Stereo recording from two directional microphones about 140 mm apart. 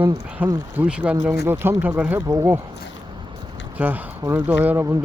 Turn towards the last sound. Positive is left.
turn(degrees=-15)  # may be behind; listen again after turning